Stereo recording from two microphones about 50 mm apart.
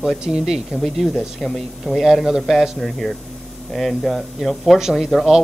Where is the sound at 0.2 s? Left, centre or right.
Centre.